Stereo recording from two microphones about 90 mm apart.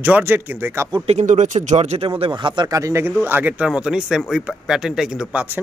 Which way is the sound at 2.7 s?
35° right (ahead or behind).